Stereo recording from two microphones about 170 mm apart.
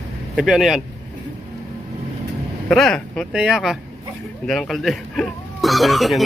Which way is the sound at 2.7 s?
Centre (ahead or behind).